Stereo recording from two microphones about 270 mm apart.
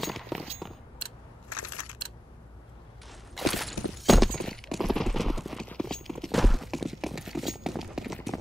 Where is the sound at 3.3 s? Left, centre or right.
Centre.